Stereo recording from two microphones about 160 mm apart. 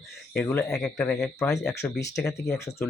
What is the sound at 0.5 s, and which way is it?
Speech, 5° left (ahead or behind).